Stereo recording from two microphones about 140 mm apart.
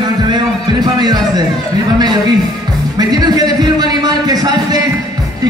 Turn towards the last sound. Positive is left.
turn(degrees=-25)  # may be behind; listen again after turning